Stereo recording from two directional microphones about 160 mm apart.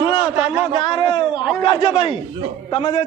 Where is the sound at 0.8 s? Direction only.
35° left (ahead or behind).